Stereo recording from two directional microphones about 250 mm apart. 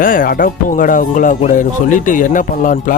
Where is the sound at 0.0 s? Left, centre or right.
Left.